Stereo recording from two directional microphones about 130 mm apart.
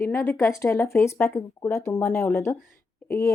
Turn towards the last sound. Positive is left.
turn(degrees=20)  # may be behind; listen again after turning